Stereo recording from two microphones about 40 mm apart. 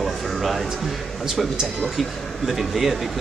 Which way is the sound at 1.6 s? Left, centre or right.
Centre.